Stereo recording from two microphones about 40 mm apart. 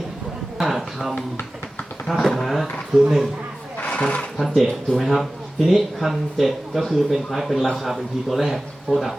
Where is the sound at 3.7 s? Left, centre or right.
Left.